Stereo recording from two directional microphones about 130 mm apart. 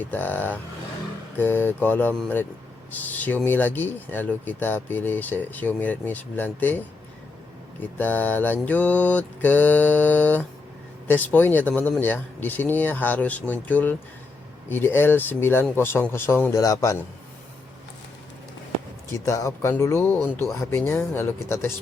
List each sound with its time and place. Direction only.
0.0 s speech: 15° left (ahead or behind)
19.2 s speech: 20° left (ahead or behind)